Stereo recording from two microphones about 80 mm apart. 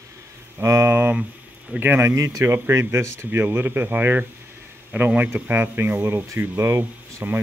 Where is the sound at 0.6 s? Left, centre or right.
Right.